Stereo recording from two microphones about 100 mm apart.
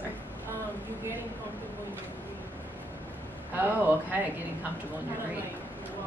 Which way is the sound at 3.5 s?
20° right (ahead or behind).